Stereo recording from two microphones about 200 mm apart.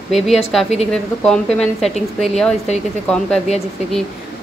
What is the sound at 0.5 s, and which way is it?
A woman's voice, centre (ahead or behind).